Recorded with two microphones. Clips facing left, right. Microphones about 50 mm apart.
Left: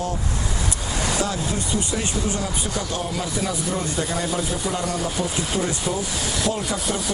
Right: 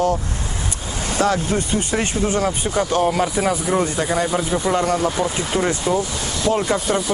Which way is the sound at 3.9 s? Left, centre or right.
Right.